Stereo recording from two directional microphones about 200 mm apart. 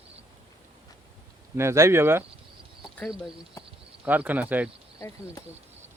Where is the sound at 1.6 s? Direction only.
15° right (ahead or behind).